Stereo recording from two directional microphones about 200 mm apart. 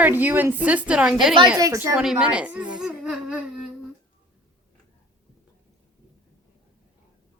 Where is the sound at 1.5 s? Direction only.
15° right (ahead or behind).